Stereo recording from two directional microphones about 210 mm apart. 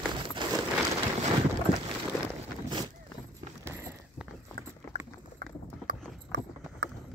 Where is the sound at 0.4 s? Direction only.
20° right (ahead or behind).